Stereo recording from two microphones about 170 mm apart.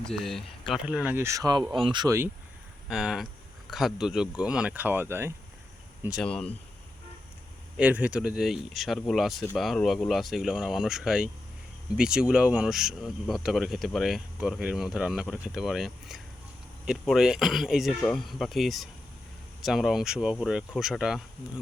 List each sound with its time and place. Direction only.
0.0 s speech: centre (ahead or behind); by 2.1 s 25° right (ahead or behind)
2.9 s speech: centre (ahead or behind)
6.1 s speech: centre (ahead or behind)
7.8 s speech: 10° right (ahead or behind)